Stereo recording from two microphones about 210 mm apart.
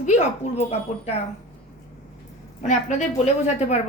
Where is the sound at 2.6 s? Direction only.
35° left (ahead or behind).